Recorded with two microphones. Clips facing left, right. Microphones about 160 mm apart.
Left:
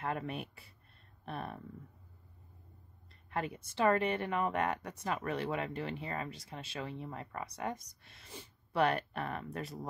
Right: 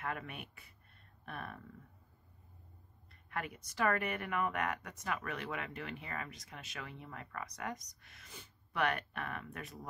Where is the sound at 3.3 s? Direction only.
25° left (ahead or behind).